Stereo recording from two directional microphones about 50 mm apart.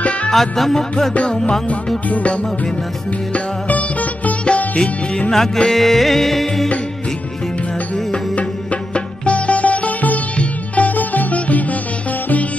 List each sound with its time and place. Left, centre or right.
0.3 s music: centre
1.1 s music: left
2.0 s music: left
3.3 s music: left
5.3 s music: centre
8.9 s music: left